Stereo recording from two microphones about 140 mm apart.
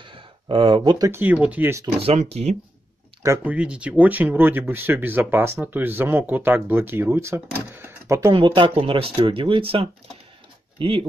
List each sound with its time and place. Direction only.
0.0 s speech: 35° right (ahead or behind)
1.2 s speech: 10° right (ahead or behind)
2.1 s speech: 50° right (ahead or behind)
3.4 s speech: 10° right (ahead or behind)
8.3 s speech: 35° right (ahead or behind)